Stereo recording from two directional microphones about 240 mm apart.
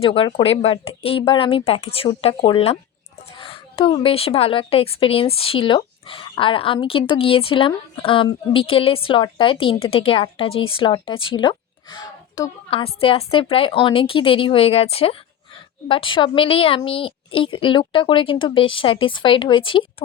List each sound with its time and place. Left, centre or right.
0.0 s a woman's voice: left